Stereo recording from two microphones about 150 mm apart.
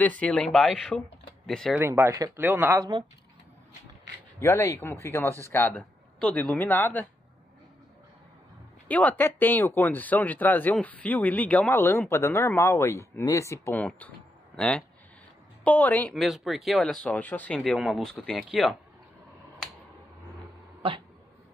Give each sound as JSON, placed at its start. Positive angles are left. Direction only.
{"t": 0.0, "sound": "speech", "side_deg": 10}
{"t": 1.8, "sound": "speech", "side_deg": -20}
{"t": 2.8, "sound": "speech", "side_deg": -25}
{"t": 4.4, "sound": "speech", "side_deg": 20}
{"t": 8.8, "sound": "speech", "side_deg": 10}
{"t": 16.2, "sound": "speech", "side_deg": 0}
{"t": 17.6, "sound": "speech", "side_deg": 0}